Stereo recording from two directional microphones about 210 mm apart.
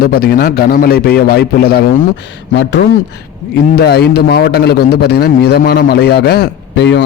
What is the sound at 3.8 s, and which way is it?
A man's voice, 50° left (ahead or behind).